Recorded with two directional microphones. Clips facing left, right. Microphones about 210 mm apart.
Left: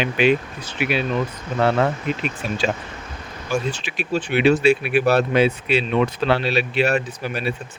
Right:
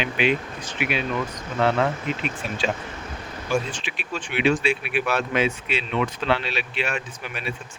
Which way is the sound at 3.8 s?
40° left (ahead or behind).